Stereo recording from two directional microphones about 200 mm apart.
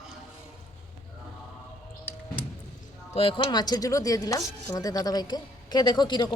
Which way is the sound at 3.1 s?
25° left (ahead or behind).